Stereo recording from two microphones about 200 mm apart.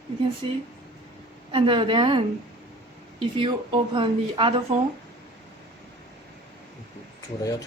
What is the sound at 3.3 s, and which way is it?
Speech, 25° right (ahead or behind).